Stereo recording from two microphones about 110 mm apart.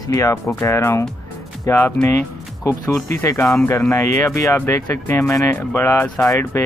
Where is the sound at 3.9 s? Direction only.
30° left (ahead or behind).